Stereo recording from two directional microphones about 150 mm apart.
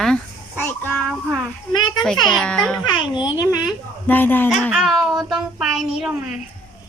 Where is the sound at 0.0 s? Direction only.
5° left (ahead or behind).